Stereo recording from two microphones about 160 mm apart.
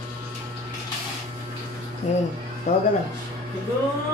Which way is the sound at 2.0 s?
50° left (ahead or behind).